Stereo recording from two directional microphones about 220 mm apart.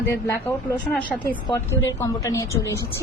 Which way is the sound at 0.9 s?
5° left (ahead or behind).